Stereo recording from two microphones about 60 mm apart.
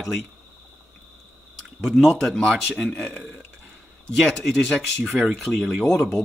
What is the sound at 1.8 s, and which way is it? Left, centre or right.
Speech, centre.